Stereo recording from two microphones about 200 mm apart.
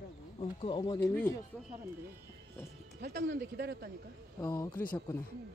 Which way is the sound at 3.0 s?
55° right (ahead or behind).